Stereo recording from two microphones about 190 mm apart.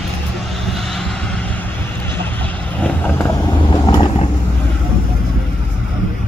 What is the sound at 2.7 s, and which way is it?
Vehicle, 10° left (ahead or behind).